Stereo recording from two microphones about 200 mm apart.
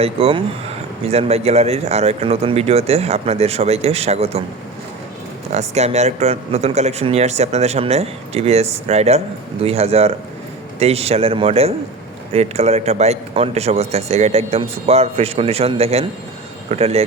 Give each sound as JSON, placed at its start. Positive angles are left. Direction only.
{"t": 0.0, "sound": "speech", "side_deg": -30}
{"t": 5.5, "sound": "speech", "side_deg": -35}